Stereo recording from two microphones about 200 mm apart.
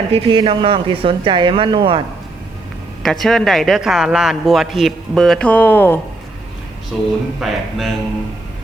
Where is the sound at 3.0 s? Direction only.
Centre (ahead or behind).